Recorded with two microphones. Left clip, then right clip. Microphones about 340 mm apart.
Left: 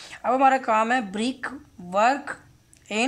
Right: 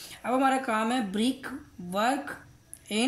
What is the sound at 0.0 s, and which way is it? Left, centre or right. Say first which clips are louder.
Speech: left 7 dB; left.